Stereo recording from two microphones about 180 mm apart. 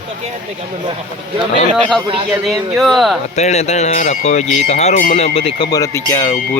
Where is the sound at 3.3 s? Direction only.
40° left (ahead or behind).